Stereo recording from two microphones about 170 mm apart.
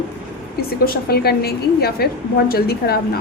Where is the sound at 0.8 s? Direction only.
65° left (ahead or behind).